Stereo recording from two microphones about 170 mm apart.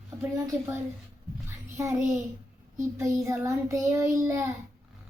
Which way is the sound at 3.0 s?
20° right (ahead or behind).